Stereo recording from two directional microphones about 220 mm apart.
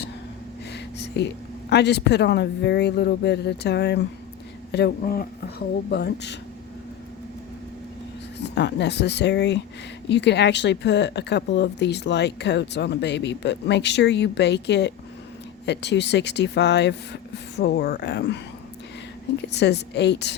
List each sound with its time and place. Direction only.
0.7 s a sound: 50° left (ahead or behind)
1.7 s a woman's voice: 50° left (ahead or behind)
8.4 s a woman's voice: 50° left (ahead or behind)
19.5 s a woman's voice: 50° left (ahead or behind)